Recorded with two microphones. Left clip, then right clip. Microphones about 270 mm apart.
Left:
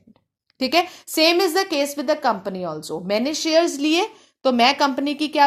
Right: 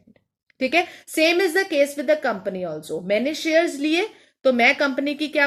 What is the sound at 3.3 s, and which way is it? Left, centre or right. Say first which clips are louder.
A woman's voice: left 1 dB; left.